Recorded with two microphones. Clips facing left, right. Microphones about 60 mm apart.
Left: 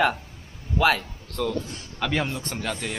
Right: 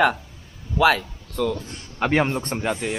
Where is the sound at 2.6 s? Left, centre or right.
Centre.